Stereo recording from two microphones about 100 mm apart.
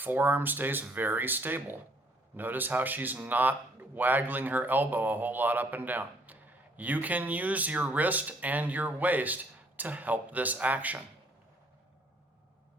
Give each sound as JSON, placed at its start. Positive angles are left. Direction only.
{"t": 0.0, "sound": "speech", "side_deg": -20}